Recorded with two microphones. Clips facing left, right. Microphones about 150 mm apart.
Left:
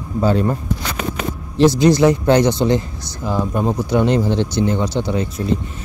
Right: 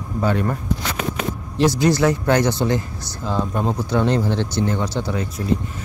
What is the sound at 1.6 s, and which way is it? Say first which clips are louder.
Speech: left 5 dB; 20° left (ahead or behind).